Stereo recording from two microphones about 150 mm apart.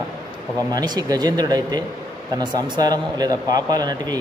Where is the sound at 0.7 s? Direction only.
25° right (ahead or behind).